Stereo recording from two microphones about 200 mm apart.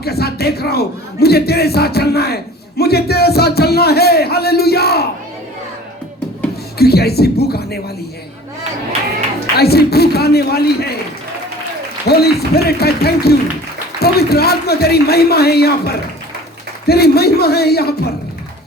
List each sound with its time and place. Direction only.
0.0 s a man's voice: 50° left (ahead or behind)
6.7 s a man's voice: 50° left (ahead or behind)
9.6 s a man's voice: 50° left (ahead or behind)
12.0 s a man's voice: 50° left (ahead or behind)
16.8 s a man's voice: 50° left (ahead or behind)